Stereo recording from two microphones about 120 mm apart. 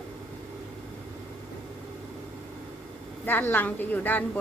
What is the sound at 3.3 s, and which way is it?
Speech, 15° left (ahead or behind).